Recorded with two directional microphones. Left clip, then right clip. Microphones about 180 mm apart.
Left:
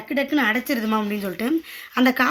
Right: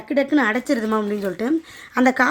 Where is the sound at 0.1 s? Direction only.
45° right (ahead or behind).